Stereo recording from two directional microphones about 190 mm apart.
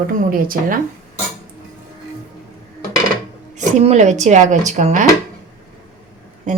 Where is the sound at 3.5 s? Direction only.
35° right (ahead or behind).